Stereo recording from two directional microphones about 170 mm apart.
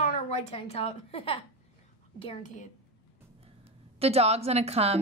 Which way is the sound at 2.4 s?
45° left (ahead or behind).